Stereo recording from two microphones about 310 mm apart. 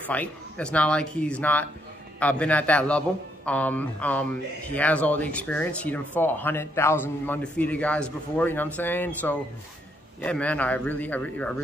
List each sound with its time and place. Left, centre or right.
0.1 s speech: centre